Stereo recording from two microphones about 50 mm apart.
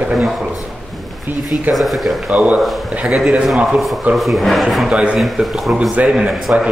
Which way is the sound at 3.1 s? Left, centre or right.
Centre.